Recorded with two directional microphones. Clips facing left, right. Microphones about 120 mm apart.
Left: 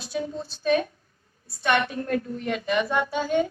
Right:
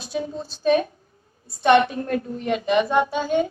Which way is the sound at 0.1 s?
25° right (ahead or behind).